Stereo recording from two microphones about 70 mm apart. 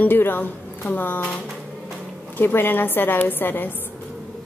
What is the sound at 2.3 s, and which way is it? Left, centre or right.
A woman's voice, left.